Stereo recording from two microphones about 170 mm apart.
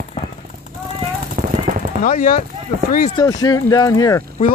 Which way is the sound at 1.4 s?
50° right (ahead or behind).